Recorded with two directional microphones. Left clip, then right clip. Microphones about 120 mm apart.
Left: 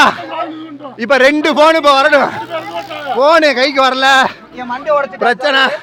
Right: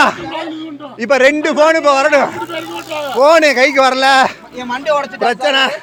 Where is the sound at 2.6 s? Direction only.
35° right (ahead or behind).